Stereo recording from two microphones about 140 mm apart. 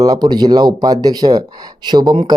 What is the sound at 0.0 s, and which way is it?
Speech, 25° right (ahead or behind).